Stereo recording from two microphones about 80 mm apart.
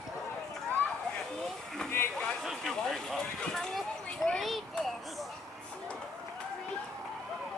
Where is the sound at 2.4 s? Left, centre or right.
Centre.